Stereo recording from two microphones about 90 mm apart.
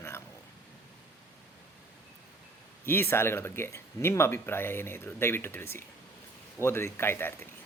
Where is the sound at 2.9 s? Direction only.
25° left (ahead or behind).